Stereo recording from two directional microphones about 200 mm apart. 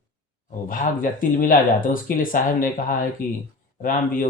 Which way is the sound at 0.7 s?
45° left (ahead or behind).